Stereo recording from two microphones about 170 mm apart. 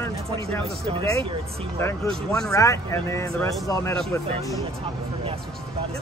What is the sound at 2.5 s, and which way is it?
Speech, 20° left (ahead or behind).